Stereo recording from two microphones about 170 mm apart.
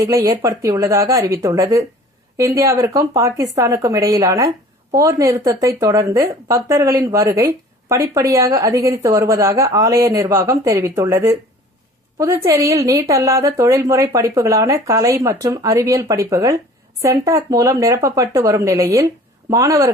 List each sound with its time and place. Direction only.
0.0 s a woman's voice: 20° right (ahead or behind)